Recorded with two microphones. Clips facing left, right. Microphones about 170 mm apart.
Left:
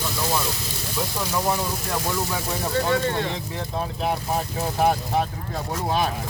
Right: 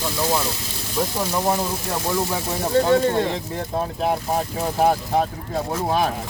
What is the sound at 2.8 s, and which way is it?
Speech, 30° right (ahead or behind).